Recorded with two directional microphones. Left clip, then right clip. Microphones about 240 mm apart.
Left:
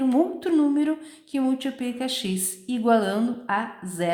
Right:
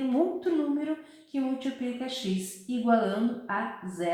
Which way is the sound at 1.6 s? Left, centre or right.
Left.